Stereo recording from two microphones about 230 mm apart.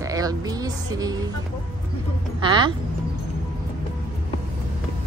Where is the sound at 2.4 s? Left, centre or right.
Centre.